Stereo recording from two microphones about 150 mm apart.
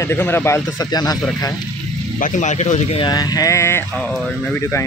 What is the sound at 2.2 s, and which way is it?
Speech, 55° left (ahead or behind).